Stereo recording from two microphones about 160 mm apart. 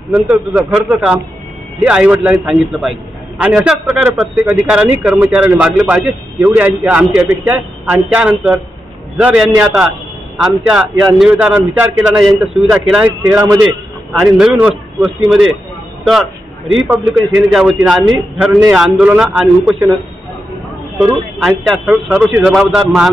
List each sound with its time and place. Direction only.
0.1 s a man's voice: 5° right (ahead or behind)
13.2 s a man's voice: 20° right (ahead or behind)
14.2 s a man's voice: 5° right (ahead or behind)
16.7 s a man's voice: 5° right (ahead or behind)
21.4 s a man's voice: centre (ahead or behind)